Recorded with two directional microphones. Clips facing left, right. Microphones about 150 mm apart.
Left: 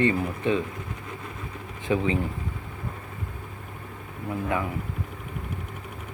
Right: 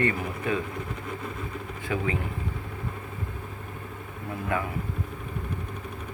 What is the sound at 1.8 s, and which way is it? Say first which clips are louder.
Speech: left 5 dB; 25° left (ahead or behind).